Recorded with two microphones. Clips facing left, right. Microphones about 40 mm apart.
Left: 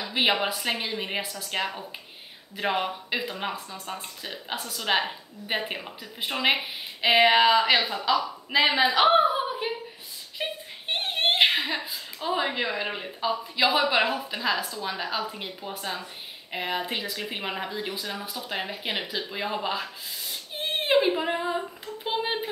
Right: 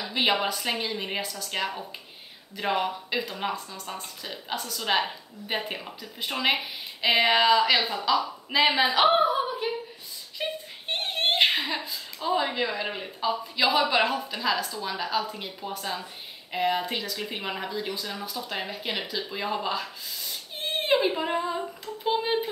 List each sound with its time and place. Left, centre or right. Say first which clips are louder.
0.0 s a woman's voice: left 1 dB; centre
8.9 s a sound: left 1 dB; centre
13.7 s speech: even; centre